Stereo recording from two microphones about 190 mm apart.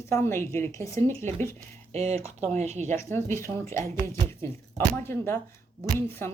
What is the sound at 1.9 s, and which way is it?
Speech, 35° right (ahead or behind).